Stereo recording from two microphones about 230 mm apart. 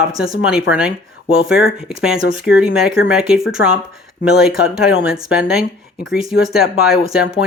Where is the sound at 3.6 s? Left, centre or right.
Left.